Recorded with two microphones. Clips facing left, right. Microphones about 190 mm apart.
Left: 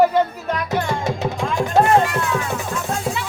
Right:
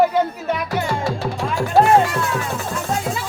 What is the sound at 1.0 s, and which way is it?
Music, 20° left (ahead or behind).